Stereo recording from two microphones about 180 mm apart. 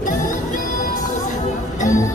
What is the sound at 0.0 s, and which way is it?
Music, 45° left (ahead or behind).